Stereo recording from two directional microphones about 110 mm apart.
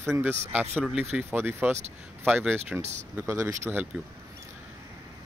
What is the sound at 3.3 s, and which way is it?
Speech, 25° right (ahead or behind).